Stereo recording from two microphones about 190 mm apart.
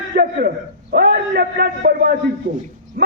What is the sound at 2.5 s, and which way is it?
Speech, 45° right (ahead or behind).